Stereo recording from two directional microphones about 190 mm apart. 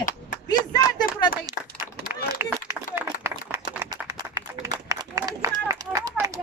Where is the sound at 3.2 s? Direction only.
15° right (ahead or behind).